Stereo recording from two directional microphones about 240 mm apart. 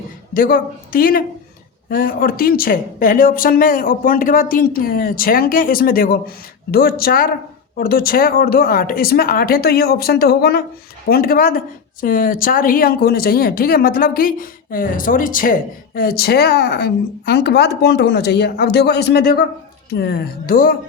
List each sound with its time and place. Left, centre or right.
0.3 s speech: left